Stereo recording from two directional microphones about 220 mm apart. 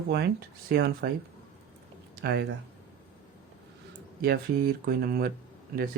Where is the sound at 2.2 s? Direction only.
45° right (ahead or behind).